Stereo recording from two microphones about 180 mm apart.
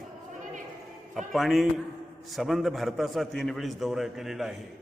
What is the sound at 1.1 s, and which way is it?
A man's voice, centre (ahead or behind).